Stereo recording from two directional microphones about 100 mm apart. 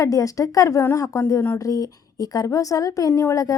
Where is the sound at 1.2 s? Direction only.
25° left (ahead or behind).